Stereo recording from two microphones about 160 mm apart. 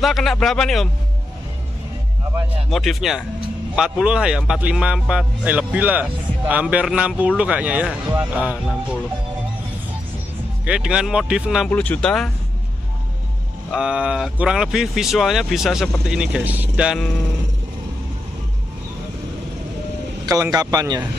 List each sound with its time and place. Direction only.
0.0 s speech: centre (ahead or behind)
2.7 s speech: centre (ahead or behind)
10.6 s speech: 5° right (ahead or behind)
11.7 s speech: 10° left (ahead or behind)
13.7 s speech: 5° right (ahead or behind)
20.5 s speech: 25° right (ahead or behind)